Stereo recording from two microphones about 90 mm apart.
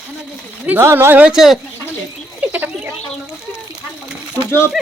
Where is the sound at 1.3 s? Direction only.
5° right (ahead or behind).